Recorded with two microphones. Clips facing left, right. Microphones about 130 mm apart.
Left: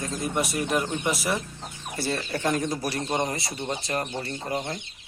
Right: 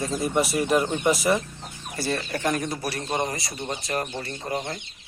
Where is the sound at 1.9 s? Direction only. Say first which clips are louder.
Right 1 dB; 25° left (ahead or behind).